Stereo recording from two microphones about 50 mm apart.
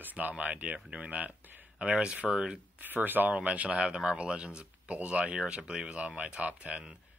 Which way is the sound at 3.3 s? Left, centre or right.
Right.